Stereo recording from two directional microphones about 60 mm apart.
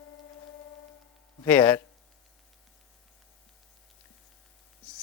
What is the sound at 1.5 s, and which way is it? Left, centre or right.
Speech, left.